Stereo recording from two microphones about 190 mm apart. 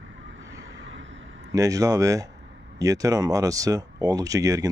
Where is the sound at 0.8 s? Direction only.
90° right.